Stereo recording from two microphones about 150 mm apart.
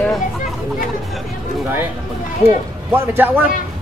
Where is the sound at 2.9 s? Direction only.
15° right (ahead or behind).